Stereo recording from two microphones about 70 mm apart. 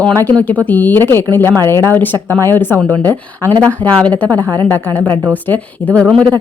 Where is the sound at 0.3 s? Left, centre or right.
Left.